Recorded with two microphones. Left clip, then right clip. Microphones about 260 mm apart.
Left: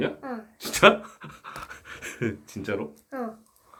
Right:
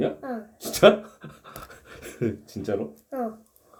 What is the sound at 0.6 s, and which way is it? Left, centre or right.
Pant, centre.